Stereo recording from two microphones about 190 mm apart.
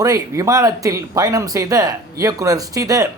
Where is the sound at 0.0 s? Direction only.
15° right (ahead or behind).